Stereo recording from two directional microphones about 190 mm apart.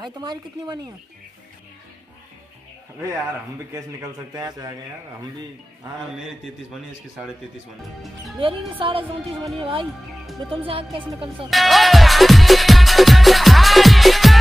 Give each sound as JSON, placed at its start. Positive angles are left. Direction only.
{"t": 0.0, "sound": "music", "side_deg": -20}
{"t": 4.3, "sound": "music", "side_deg": -20}
{"t": 6.1, "sound": "a man's voice", "side_deg": 0}
{"t": 8.4, "sound": "music", "side_deg": -30}
{"t": 11.5, "sound": "music", "side_deg": 0}